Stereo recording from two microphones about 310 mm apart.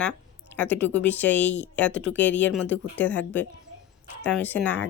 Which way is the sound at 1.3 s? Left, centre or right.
Left.